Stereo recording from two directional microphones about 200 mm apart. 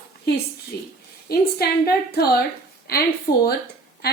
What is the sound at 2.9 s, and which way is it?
Speech, 50° left (ahead or behind).